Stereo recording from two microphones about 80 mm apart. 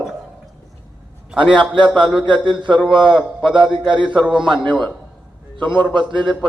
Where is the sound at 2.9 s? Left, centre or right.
Right.